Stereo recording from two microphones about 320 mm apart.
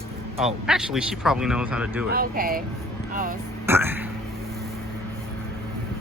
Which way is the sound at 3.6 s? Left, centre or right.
Centre.